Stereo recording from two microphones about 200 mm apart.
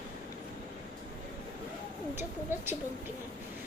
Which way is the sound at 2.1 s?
10° right (ahead or behind).